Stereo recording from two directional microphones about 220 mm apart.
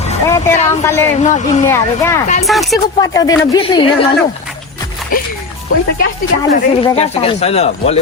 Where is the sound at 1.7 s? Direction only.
10° left (ahead or behind).